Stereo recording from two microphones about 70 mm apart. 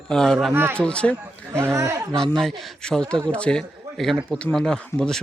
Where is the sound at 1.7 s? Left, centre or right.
Right.